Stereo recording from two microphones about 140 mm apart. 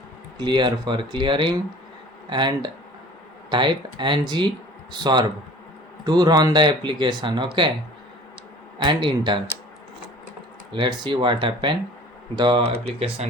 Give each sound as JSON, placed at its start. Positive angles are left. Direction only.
{"t": 0.3, "sound": "speech", "side_deg": -35}
{"t": 6.1, "sound": "speech", "side_deg": -30}
{"t": 8.8, "sound": "speech", "side_deg": -35}
{"t": 10.7, "sound": "speech", "side_deg": -35}
{"t": 12.6, "sound": "speech", "side_deg": -50}